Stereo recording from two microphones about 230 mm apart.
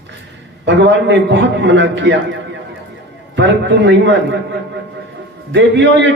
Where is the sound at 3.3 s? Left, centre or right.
Right.